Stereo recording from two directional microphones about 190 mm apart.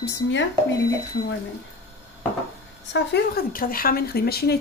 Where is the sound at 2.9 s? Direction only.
60° left (ahead or behind).